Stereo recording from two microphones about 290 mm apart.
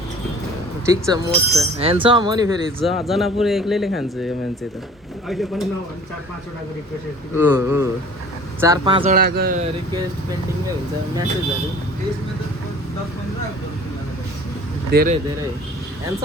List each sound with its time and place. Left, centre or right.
0.9 s speech: centre
2.8 s speech: centre
5.3 s speech: centre
7.3 s speech: centre
9.1 s speech: right
14.9 s speech: right